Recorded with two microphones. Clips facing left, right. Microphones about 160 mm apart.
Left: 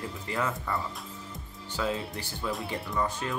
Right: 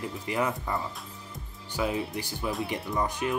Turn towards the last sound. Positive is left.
turn(degrees=-15)  # may be behind; listen again after turning